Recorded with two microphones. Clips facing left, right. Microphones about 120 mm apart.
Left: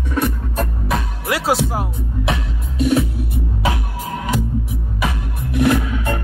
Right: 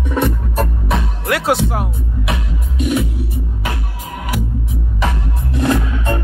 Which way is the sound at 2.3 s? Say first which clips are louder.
Left 1 dB; 35° left (ahead or behind).